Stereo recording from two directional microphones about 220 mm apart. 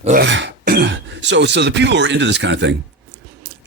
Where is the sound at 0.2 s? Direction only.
55° right (ahead or behind).